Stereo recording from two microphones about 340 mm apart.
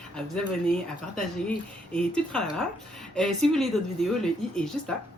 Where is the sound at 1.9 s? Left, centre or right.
Centre.